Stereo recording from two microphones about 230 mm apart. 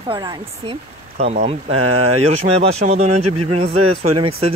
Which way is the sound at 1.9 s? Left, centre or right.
Right.